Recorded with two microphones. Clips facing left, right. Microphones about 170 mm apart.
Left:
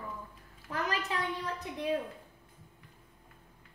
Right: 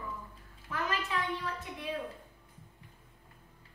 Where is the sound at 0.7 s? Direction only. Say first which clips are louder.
Left 1 dB; 40° left (ahead or behind).